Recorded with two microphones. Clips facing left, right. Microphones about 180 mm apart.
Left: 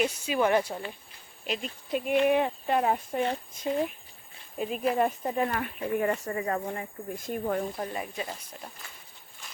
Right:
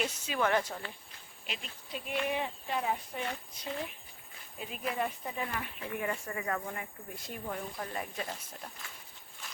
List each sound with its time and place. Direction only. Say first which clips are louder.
0.0 s speech: left 6 dB; 10° left (ahead or behind)
1.5 s speech: left 11 dB; 55° left (ahead or behind); by 6.8 s 30° left (ahead or behind)
7.2 s speech: left 10 dB; 50° left (ahead or behind)
7.9 s speech: left 4 dB; 5° left (ahead or behind)